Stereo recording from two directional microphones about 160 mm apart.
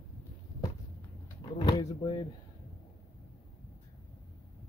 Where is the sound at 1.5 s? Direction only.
25° left (ahead or behind).